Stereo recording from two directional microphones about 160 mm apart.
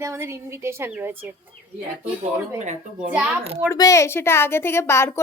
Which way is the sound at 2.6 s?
45° right (ahead or behind).